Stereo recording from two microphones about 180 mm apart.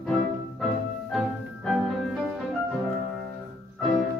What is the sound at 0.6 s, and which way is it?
Music, 5° left (ahead or behind).